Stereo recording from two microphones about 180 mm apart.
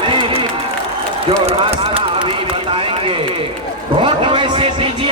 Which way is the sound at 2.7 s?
30° right (ahead or behind).